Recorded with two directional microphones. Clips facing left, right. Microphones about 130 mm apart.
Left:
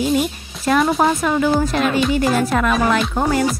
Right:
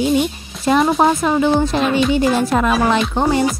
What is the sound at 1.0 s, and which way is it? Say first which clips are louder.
Speech: right 2 dB; 25° right (ahead or behind).